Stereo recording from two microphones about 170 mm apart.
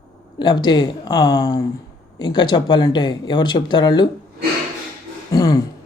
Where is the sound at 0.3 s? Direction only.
25° left (ahead or behind).